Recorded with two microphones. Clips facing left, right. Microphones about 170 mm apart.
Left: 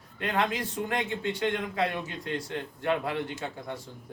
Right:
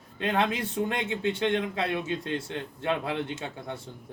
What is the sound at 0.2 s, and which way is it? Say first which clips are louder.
A man's voice: right 2 dB; 25° right (ahead or behind).